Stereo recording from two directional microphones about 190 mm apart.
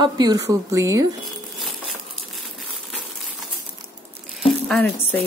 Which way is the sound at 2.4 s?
Centre (ahead or behind).